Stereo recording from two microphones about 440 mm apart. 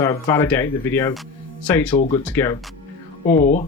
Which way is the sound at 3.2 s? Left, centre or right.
Centre.